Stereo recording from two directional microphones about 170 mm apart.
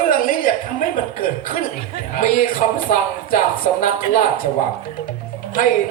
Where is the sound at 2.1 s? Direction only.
55° left (ahead or behind).